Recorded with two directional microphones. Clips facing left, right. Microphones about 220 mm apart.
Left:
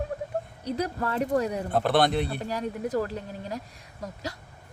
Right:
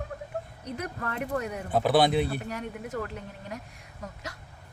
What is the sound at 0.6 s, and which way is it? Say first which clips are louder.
Speech: left 8 dB; 35° left (ahead or behind).